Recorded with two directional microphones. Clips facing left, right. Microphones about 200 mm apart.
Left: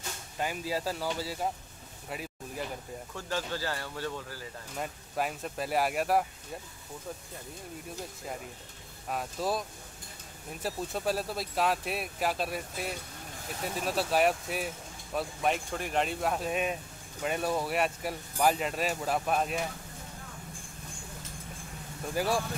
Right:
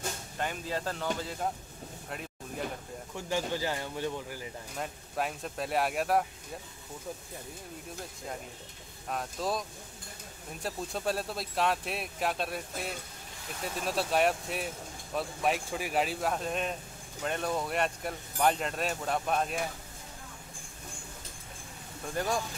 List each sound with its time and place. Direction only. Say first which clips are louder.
0.4 s speech: left 2 dB; 10° left (ahead or behind)
2.0 s a sound: left 3 dB; 5° left (ahead or behind)
3.2 s speech: right 3 dB; 15° right (ahead or behind)
4.7 s speech: left 1 dB; centre (ahead or behind)
9.1 s speech: left 1 dB; 5° left (ahead or behind)
22.1 s speech: left 2 dB; 5° left (ahead or behind)